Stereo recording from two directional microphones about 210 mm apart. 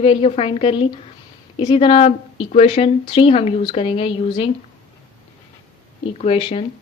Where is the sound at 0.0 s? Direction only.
25° left (ahead or behind).